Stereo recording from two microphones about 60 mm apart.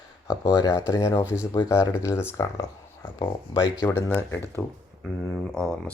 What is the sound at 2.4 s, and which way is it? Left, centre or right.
Speech, left.